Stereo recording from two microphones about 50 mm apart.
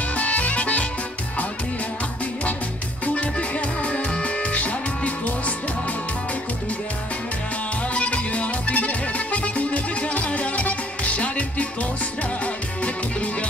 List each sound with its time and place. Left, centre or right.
0.1 s music: left
3.2 s music: left
7.9 s music: left
12.8 s music: left